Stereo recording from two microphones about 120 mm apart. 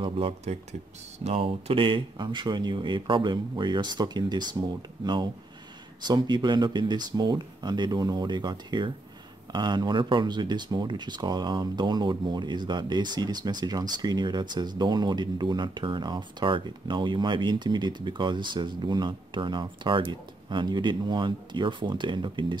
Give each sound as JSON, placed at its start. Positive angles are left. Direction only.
{"t": 0.0, "sound": "speech", "side_deg": -60}